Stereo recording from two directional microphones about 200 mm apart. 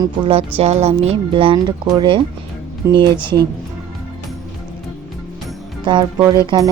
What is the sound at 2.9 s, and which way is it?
Speech, 55° right (ahead or behind).